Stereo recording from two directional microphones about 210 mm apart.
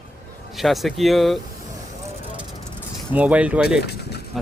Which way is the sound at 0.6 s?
Centre (ahead or behind).